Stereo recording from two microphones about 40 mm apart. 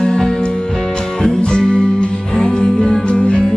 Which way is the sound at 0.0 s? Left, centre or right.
Centre.